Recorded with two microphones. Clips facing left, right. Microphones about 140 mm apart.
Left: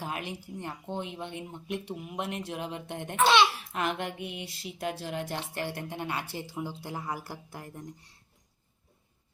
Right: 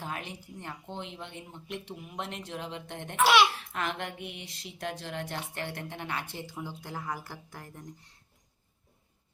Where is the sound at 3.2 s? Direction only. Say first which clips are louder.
Even; 5° right (ahead or behind).